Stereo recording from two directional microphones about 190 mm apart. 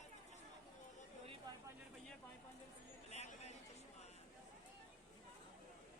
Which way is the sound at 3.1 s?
35° left (ahead or behind).